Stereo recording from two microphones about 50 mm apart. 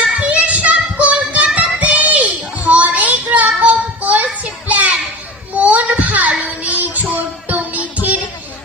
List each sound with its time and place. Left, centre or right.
0.3 s child singing: right
1.5 s children playing: right
5.5 s a sound: right
6.6 s music: right